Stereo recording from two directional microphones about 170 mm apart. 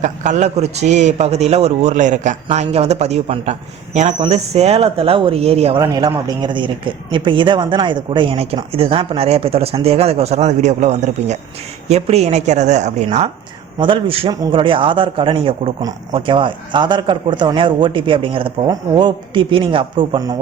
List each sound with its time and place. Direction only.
0.0 s a man's voice: 45° right (ahead or behind)
5.8 s a man's voice: 20° right (ahead or behind)